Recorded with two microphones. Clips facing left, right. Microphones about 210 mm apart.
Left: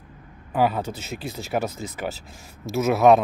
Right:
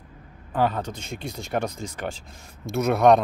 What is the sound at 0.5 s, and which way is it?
Speech, 10° left (ahead or behind).